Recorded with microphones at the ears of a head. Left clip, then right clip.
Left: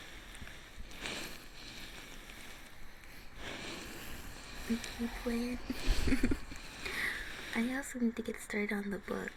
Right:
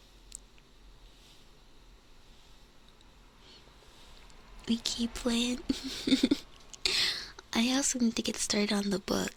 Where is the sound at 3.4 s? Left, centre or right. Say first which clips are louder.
Left 14 dB; left.